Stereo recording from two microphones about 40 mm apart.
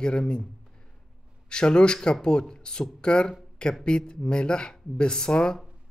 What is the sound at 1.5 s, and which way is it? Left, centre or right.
Speech, left.